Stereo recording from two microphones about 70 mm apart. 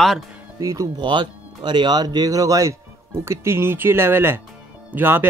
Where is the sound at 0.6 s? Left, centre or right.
Right.